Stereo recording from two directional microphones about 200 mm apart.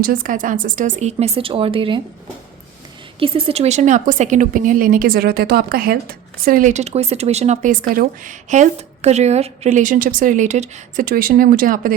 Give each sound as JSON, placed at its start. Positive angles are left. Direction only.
{"t": 0.0, "sound": "speech", "side_deg": -45}
{"t": 3.2, "sound": "speech", "side_deg": -25}